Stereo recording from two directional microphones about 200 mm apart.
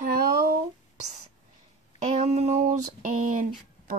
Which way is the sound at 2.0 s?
35° right (ahead or behind).